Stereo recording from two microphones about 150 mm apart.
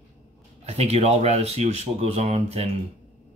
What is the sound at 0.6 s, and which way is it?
Speech, 45° right (ahead or behind).